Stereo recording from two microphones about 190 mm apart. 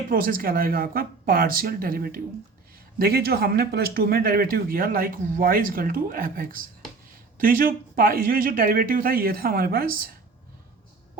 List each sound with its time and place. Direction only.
0.1 s speech: 50° right (ahead or behind)